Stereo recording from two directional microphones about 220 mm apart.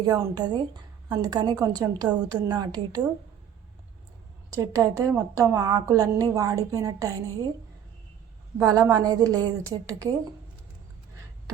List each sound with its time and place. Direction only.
0.0 s a woman's voice: 15° right (ahead or behind)
4.5 s a woman's voice: 15° right (ahead or behind)
8.5 s a woman's voice: 15° right (ahead or behind)